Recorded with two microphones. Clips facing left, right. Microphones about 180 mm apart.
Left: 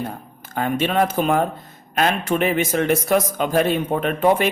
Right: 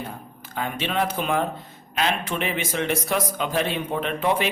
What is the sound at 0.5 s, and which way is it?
Speech, 45° left (ahead or behind).